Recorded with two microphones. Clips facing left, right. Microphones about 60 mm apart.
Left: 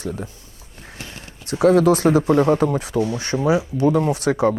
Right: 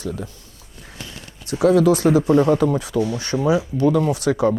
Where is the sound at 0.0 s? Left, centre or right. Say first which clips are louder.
Even; left.